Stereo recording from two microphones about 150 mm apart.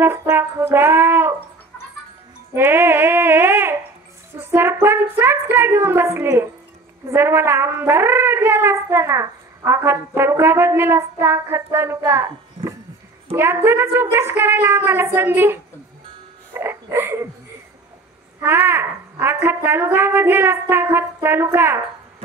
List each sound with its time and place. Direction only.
0.0 s brass instrument: 15° right (ahead or behind)
2.5 s a sound: 15° right (ahead or behind)
4.4 s speech: 15° right (ahead or behind)
13.3 s speech: 15° right (ahead or behind)
16.5 s a sound: 15° right (ahead or behind)
18.4 s speech: 15° right (ahead or behind)